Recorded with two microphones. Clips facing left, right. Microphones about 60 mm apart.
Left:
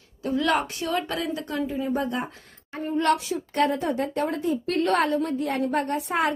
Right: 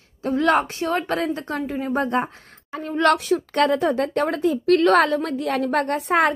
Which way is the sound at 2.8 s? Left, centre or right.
Right.